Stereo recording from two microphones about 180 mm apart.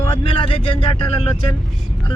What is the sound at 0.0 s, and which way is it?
Speech, 30° left (ahead or behind).